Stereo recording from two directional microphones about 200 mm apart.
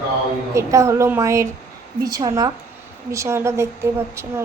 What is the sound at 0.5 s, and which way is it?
Speech, 15° right (ahead or behind).